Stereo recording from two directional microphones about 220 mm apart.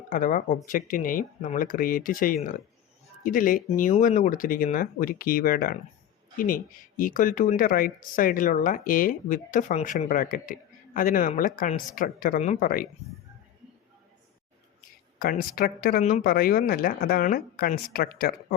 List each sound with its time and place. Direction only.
0.1 s speech: 40° left (ahead or behind)
14.8 s speech: 40° left (ahead or behind)